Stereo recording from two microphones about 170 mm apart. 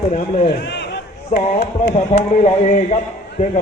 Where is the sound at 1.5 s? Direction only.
40° left (ahead or behind).